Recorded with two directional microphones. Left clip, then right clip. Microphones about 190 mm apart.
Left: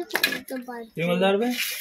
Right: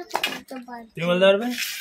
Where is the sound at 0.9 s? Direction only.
50° right (ahead or behind).